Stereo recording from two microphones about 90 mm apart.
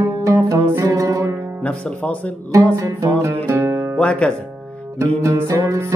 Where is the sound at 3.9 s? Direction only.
15° left (ahead or behind).